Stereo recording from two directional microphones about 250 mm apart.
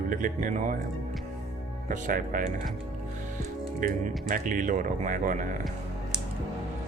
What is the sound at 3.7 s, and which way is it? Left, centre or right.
Speech, right.